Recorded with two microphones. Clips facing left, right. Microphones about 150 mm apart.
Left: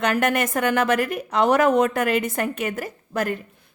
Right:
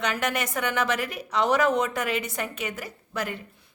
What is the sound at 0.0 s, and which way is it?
Speech, 50° left (ahead or behind).